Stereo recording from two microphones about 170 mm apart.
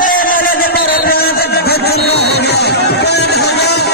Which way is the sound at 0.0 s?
55° left (ahead or behind).